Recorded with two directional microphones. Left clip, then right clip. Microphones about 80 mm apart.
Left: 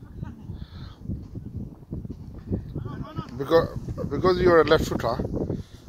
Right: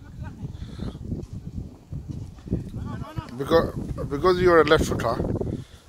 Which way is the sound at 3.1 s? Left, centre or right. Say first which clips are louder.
Even; centre.